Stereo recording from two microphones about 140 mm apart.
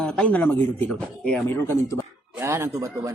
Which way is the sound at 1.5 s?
20° left (ahead or behind).